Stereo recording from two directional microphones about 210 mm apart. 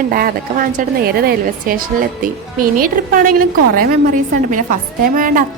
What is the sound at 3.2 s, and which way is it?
Speech, 90° right.